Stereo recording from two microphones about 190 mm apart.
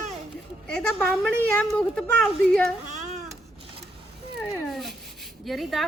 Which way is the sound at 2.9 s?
40° right (ahead or behind).